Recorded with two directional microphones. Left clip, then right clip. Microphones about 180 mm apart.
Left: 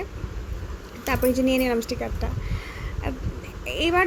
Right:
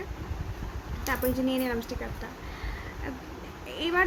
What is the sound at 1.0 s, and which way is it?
A woman's voice, 30° left (ahead or behind).